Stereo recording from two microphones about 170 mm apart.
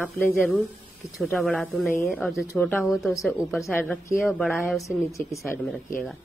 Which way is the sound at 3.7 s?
15° left (ahead or behind).